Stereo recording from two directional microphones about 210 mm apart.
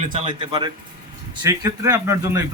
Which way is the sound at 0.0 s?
20° right (ahead or behind).